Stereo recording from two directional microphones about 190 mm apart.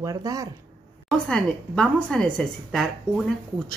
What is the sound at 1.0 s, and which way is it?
A woman's voice, 5° left (ahead or behind).